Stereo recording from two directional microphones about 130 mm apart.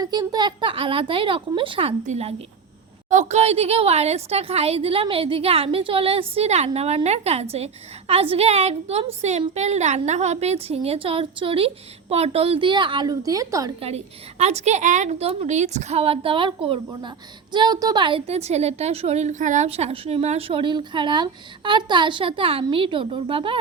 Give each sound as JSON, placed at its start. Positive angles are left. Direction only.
{"t": 0.0, "sound": "speech", "side_deg": -30}
{"t": 2.0, "sound": "a woman's voice", "side_deg": -55}
{"t": 13.8, "sound": "a woman's voice", "side_deg": -55}
{"t": 18.3, "sound": "a woman's voice", "side_deg": -55}